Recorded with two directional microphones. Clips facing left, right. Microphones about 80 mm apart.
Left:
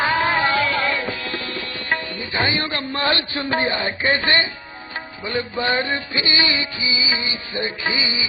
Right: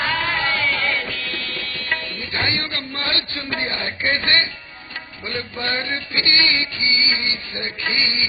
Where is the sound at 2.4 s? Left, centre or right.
Left.